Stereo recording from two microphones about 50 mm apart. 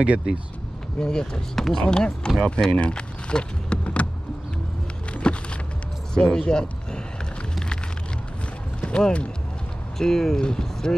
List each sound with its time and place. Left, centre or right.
0.0 s speech: right
0.9 s speech: centre
5.1 s a sound: left
6.1 s speech: centre
8.8 s speech: left
9.9 s speech: centre